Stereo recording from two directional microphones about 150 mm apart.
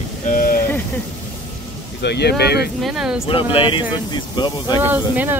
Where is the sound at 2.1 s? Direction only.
90° left.